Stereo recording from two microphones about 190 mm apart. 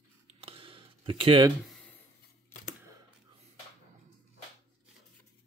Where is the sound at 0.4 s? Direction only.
30° right (ahead or behind).